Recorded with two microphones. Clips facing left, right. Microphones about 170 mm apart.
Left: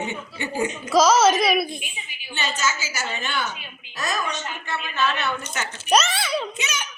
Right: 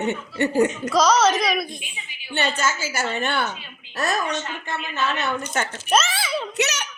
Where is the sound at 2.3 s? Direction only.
60° right (ahead or behind).